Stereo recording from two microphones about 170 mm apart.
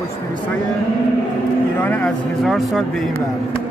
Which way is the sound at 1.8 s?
10° left (ahead or behind).